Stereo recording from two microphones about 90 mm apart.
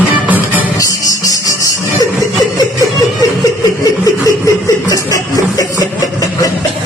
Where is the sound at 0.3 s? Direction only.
20° right (ahead or behind).